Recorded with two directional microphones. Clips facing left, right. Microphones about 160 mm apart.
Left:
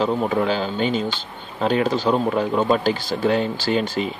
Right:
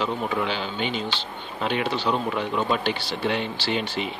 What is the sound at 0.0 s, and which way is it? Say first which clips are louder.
Speech: left 6 dB; 40° left (ahead or behind).